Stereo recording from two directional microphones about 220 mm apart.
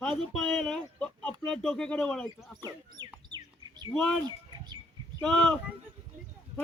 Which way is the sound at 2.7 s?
20° right (ahead or behind).